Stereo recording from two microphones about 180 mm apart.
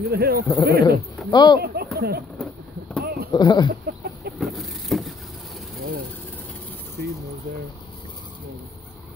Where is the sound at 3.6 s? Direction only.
60° right (ahead or behind).